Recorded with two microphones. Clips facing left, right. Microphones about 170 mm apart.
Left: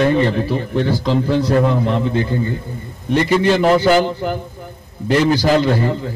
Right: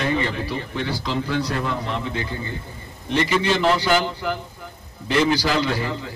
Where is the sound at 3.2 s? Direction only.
45° left (ahead or behind).